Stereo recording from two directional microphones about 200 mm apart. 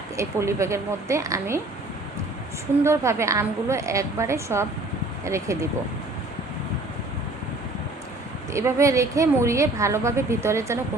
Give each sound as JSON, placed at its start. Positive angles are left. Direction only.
{"t": 0.2, "sound": "a woman's voice", "side_deg": -15}
{"t": 2.8, "sound": "a woman's voice", "side_deg": -15}
{"t": 8.5, "sound": "a woman's voice", "side_deg": -15}